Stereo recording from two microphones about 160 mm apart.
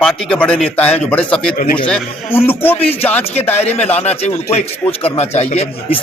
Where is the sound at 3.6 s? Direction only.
40° left (ahead or behind).